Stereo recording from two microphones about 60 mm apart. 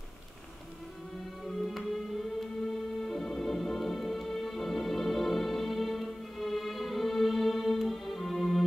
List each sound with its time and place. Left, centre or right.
1.4 s music: centre
3.0 s music: centre